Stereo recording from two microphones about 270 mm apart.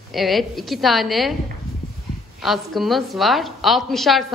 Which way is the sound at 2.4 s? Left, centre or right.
Centre.